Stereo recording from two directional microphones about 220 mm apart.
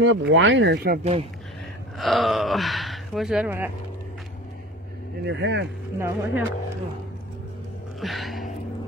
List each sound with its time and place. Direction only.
0.0 s speech: 55° right (ahead or behind)
2.0 s speech: centre (ahead or behind)
5.2 s speech: 55° right (ahead or behind)
5.9 s speech: 10° right (ahead or behind)
8.0 s speech: centre (ahead or behind)